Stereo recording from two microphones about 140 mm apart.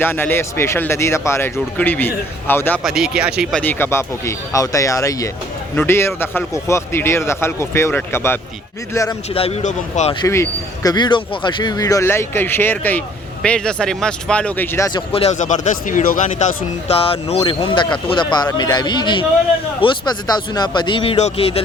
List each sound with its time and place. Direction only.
0.0 s speech: 15° left (ahead or behind)
2.8 s speech: 5° right (ahead or behind)
3.5 s speech: 15° left (ahead or behind)
9.3 s speech: 45° left (ahead or behind)
9.6 s speech: 60° left (ahead or behind)
10.2 s speech: 20° left (ahead or behind)
10.9 s speech: 30° left (ahead or behind); by 14.8 s 15° left (ahead or behind)
14.9 s speech: 45° left (ahead or behind)
17.0 s speech: 45° left (ahead or behind)